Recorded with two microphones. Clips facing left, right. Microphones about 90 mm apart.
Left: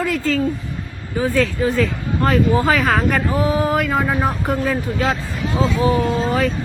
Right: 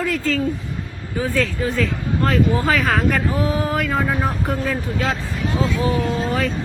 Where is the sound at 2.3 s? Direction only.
15° left (ahead or behind).